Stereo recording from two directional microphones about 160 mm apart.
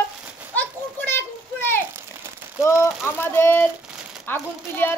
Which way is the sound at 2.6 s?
15° left (ahead or behind).